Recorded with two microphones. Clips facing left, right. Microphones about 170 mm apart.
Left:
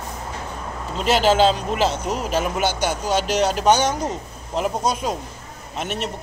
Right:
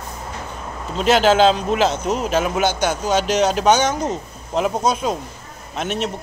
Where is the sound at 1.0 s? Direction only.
5° left (ahead or behind).